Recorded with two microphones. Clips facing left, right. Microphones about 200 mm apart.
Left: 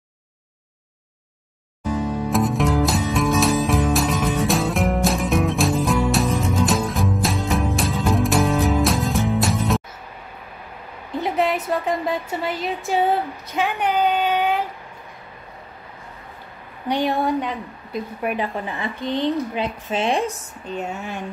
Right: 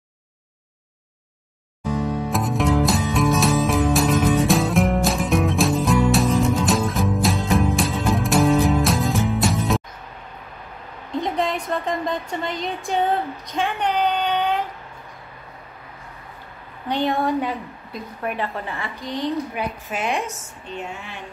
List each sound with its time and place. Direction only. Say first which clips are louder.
2.3 s music: left 1 dB; centre (ahead or behind)
11.2 s speech: left 4 dB; 5° left (ahead or behind)
16.8 s a woman's voice: left 1 dB; 10° left (ahead or behind)
17.2 s speech: even; 5° right (ahead or behind)
18.2 s a woman's voice: left 1 dB; 15° left (ahead or behind)
18.9 s a woman's voice: left 3 dB; 30° left (ahead or behind)